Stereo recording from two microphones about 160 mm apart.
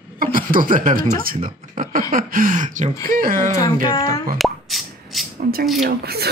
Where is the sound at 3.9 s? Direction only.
25° left (ahead or behind).